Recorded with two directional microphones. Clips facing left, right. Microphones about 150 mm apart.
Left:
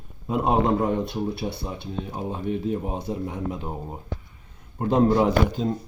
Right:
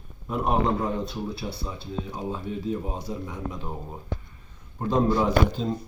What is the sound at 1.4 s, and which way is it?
Speech, 35° left (ahead or behind).